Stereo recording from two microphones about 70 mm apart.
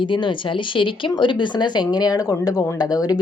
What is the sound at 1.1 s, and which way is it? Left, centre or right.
A woman's voice, left.